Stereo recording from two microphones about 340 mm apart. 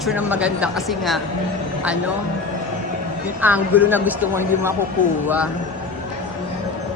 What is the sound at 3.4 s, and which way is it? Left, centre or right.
A woman's voice, centre.